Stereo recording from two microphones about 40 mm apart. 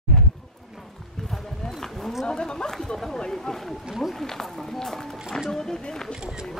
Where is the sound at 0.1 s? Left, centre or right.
Centre.